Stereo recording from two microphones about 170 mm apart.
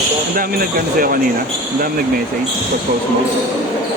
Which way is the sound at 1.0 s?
60° right (ahead or behind).